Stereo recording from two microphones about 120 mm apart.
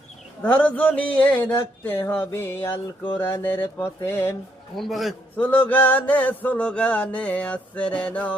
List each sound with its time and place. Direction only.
0.4 s mantra: 15° left (ahead or behind)
4.8 s a man's voice: centre (ahead or behind)
5.4 s mantra: 15° left (ahead or behind)